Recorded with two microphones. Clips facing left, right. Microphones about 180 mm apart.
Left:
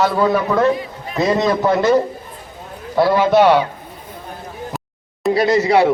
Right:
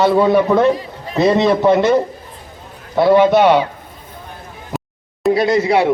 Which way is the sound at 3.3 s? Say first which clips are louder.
Even; centre (ahead or behind).